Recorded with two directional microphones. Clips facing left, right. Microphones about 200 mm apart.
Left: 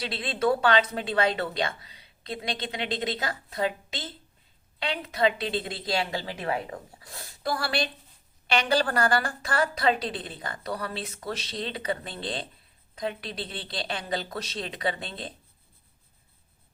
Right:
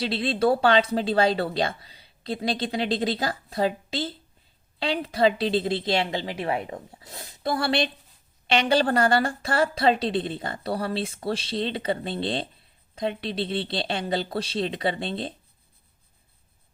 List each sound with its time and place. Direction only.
0.0 s a woman's voice: 30° right (ahead or behind)